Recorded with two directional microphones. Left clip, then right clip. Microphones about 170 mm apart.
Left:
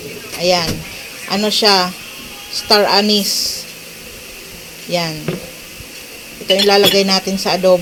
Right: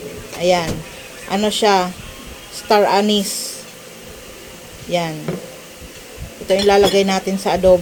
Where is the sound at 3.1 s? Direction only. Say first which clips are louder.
Left 4 dB; 30° right (ahead or behind).